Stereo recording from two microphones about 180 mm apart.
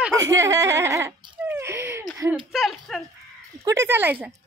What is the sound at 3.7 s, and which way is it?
Speech, 15° right (ahead or behind).